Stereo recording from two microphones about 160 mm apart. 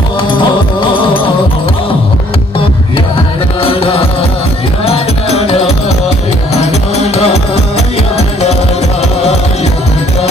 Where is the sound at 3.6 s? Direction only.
35° left (ahead or behind).